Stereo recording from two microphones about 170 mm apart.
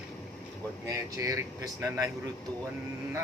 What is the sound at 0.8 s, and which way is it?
Speech, 20° right (ahead or behind).